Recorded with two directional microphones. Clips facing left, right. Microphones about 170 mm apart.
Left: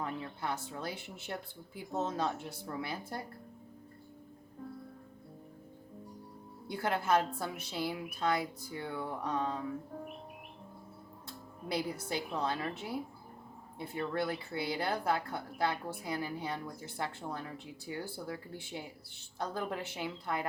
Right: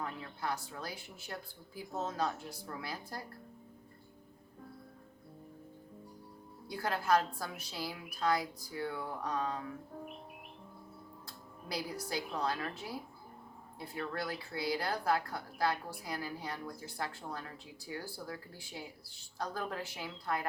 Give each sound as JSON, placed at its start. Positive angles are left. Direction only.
{"t": 0.0, "sound": "speech", "side_deg": 25}
{"t": 6.7, "sound": "speech", "side_deg": 25}
{"t": 11.3, "sound": "speech", "side_deg": 25}